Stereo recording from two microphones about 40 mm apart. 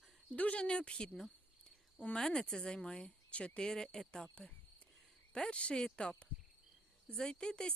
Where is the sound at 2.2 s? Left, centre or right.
Centre.